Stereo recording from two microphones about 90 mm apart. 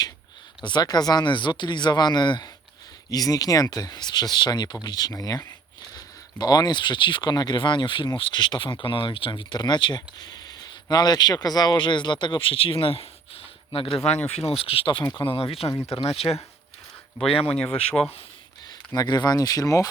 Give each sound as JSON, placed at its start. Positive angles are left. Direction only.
{"t": 0.6, "sound": "speech", "side_deg": 50}
{"t": 3.1, "sound": "speech", "side_deg": 45}
{"t": 6.4, "sound": "speech", "side_deg": 50}
{"t": 15.0, "sound": "speech", "side_deg": 20}
{"t": 15.3, "sound": "speech", "side_deg": 90}
{"t": 15.7, "sound": "speech", "side_deg": 35}
{"t": 16.0, "sound": "speech", "side_deg": 90}
{"t": 17.5, "sound": "speech", "side_deg": 10}
{"t": 18.9, "sound": "speech", "side_deg": 50}